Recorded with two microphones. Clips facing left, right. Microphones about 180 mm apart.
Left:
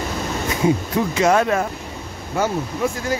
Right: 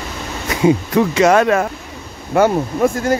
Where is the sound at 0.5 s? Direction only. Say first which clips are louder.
Right 6 dB; 80° right.